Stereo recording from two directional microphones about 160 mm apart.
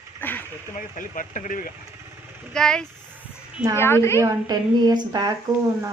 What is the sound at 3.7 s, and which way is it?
Speech, 15° left (ahead or behind).